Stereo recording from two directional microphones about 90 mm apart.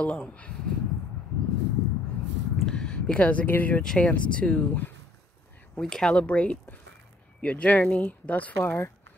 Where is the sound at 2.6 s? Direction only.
10° left (ahead or behind).